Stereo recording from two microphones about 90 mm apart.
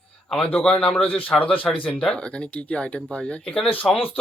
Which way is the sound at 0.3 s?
15° left (ahead or behind).